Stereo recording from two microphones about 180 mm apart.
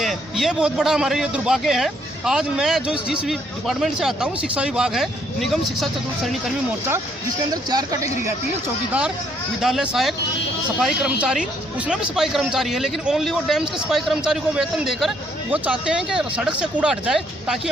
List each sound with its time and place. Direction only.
0.0 s a man's voice: centre (ahead or behind)
7.5 s speech: 20° right (ahead or behind)
8.9 s a man's voice: 5° right (ahead or behind)